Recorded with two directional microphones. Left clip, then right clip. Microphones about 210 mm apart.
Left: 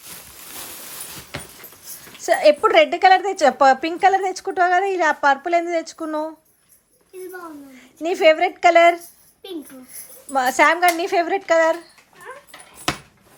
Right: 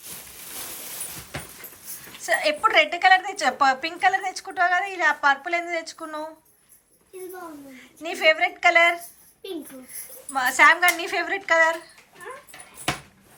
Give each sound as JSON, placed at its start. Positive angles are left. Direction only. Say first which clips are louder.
{"t": 2.2, "sound": "a woman's voice", "louder": "left 7 dB", "side_deg": 35}
{"t": 7.8, "sound": "a woman's voice", "louder": "left 7 dB", "side_deg": 35}
{"t": 10.3, "sound": "a woman's voice", "louder": "left 1 dB", "side_deg": 30}